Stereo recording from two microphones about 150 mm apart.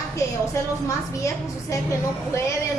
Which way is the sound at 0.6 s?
20° left (ahead or behind).